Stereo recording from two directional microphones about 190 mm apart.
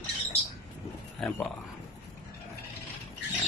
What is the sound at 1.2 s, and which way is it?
Speech, 10° left (ahead or behind).